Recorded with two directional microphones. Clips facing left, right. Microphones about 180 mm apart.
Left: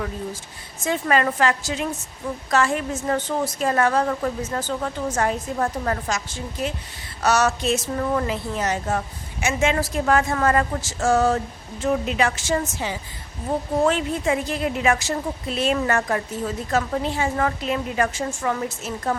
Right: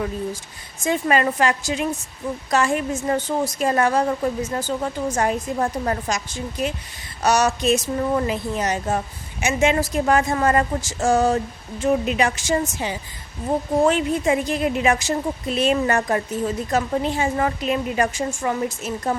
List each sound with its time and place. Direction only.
0.9 s a woman's voice: 15° right (ahead or behind)